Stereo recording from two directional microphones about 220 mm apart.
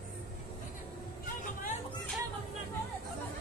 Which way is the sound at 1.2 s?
35° left (ahead or behind).